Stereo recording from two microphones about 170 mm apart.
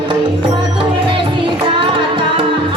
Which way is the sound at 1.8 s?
30° right (ahead or behind).